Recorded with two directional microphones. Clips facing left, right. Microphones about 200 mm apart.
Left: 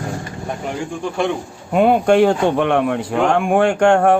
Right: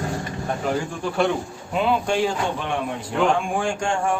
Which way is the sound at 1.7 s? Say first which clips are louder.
Left 9 dB; 55° left (ahead or behind).